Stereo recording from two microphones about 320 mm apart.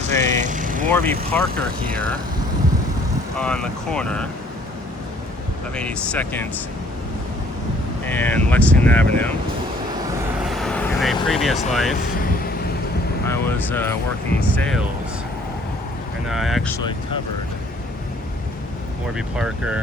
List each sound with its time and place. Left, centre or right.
0.1 s vehicle: right
0.9 s speech: centre
3.3 s speech: centre
5.7 s speech: centre
8.0 s speech: centre
10.4 s vehicle: centre
11.7 s speech: centre
13.2 s speech: centre
16.3 s speech: centre
19.1 s speech: centre